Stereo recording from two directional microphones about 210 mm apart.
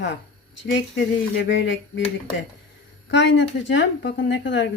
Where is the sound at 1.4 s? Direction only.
60° left (ahead or behind).